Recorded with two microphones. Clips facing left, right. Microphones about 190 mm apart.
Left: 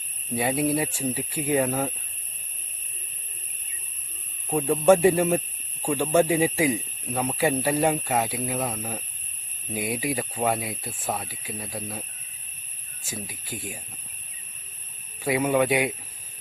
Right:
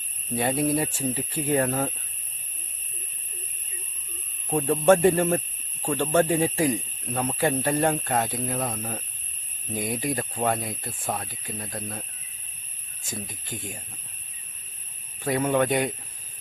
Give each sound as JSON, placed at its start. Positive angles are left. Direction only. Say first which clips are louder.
{"t": 0.3, "sound": "speech", "louder": "even", "side_deg": 10}
{"t": 4.4, "sound": "speech", "louder": "left 1 dB", "side_deg": 10}
{"t": 13.1, "sound": "speech", "louder": "even", "side_deg": 5}
{"t": 15.2, "sound": "speech", "louder": "left 1 dB", "side_deg": 10}